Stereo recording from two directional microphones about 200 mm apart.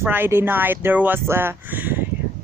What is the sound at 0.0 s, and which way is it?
A woman's voice, 10° right (ahead or behind).